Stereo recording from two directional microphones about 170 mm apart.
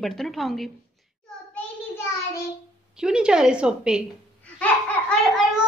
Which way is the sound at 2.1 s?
15° left (ahead or behind).